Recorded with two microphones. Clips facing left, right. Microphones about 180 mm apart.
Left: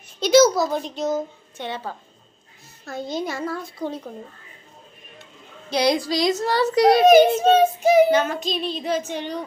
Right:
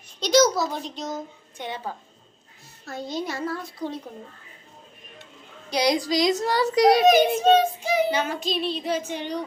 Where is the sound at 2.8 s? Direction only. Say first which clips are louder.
Left 3 dB; centre (ahead or behind).